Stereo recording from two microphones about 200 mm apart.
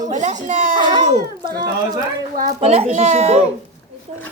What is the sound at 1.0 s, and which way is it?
Speech, 45° right (ahead or behind).